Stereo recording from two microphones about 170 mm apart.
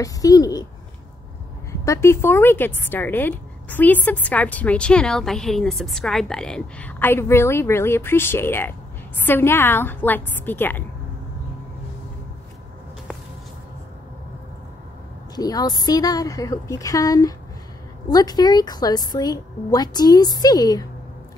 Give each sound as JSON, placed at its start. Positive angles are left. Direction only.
{"t": 0.0, "sound": "a woman's voice", "side_deg": 20}
{"t": 1.7, "sound": "a woman's voice", "side_deg": 15}
{"t": 15.3, "sound": "a woman's voice", "side_deg": 20}